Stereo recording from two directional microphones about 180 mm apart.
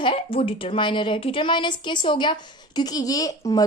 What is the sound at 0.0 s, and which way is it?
Speech, 30° left (ahead or behind).